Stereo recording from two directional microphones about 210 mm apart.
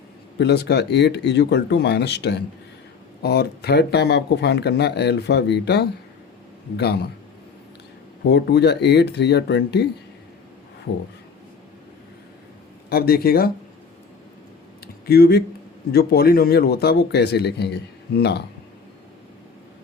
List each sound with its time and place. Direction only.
0.3 s speech: 50° left (ahead or behind)
8.3 s speech: 55° left (ahead or behind)
12.9 s speech: 45° left (ahead or behind)
15.0 s speech: 45° left (ahead or behind)